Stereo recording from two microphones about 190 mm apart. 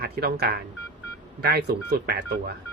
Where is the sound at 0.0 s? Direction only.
55° right (ahead or behind).